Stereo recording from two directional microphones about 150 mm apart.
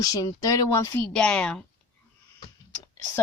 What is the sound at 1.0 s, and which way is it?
Speech, 5° left (ahead or behind).